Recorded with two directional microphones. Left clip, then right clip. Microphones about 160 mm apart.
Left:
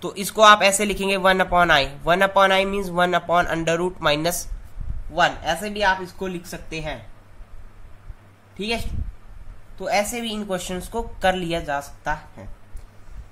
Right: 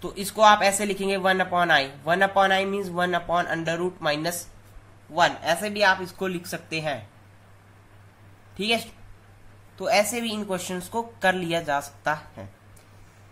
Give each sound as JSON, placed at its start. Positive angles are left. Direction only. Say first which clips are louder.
{"t": 0.0, "sound": "speech", "louder": "left 4 dB", "side_deg": 35}
{"t": 5.2, "sound": "speech", "louder": "left 1 dB", "side_deg": 5}
{"t": 6.0, "sound": "speech", "louder": "even", "side_deg": -15}
{"t": 9.8, "sound": "speech", "louder": "even", "side_deg": -5}